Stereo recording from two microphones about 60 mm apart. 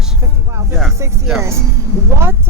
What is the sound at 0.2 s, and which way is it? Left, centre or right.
Music, right.